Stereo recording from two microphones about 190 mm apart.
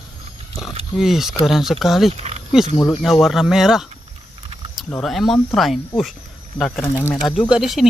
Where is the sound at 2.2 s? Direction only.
35° right (ahead or behind).